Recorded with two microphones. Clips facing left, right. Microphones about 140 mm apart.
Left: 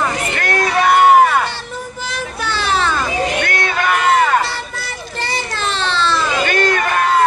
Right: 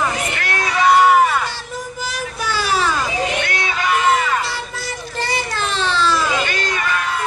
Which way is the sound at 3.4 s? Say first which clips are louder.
Left 3 dB; 50° left (ahead or behind).